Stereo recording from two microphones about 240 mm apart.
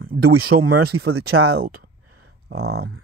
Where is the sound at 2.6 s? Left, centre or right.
Right.